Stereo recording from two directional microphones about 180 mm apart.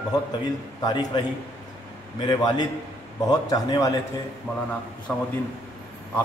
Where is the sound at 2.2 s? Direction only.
20° left (ahead or behind).